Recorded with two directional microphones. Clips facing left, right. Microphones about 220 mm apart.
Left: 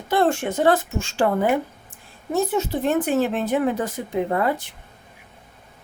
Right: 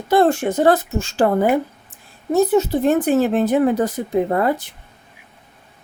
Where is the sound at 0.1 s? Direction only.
40° right (ahead or behind).